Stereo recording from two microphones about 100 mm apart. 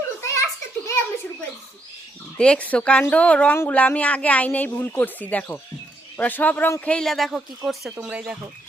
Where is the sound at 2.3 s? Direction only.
10° left (ahead or behind).